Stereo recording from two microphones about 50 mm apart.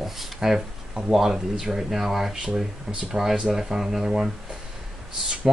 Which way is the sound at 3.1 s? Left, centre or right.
Centre.